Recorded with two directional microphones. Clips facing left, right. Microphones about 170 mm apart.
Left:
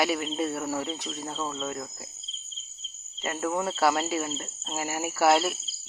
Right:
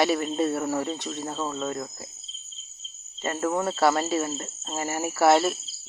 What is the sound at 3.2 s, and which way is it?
Speech, 10° left (ahead or behind).